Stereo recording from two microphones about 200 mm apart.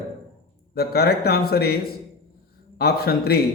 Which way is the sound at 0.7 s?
50° left (ahead or behind).